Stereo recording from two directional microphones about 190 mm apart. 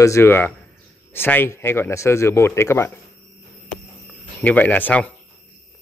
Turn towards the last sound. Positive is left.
turn(degrees=10)  # may be behind; listen again after turning